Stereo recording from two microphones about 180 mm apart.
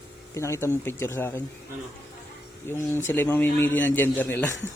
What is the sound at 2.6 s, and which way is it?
A man's voice, 15° left (ahead or behind).